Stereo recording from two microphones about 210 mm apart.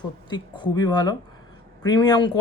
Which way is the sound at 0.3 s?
20° left (ahead or behind).